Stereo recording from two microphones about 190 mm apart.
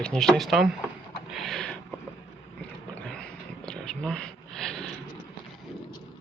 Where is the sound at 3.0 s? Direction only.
5° left (ahead or behind).